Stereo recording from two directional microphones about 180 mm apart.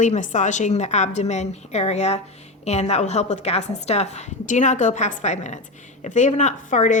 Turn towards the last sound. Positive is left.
turn(degrees=45)  # may be behind; listen again after turning